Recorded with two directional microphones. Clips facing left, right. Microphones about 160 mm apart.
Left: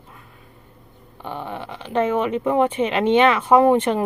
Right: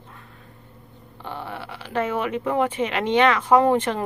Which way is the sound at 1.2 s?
15° left (ahead or behind).